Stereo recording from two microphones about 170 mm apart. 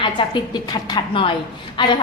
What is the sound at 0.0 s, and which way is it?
A woman's voice, 30° left (ahead or behind).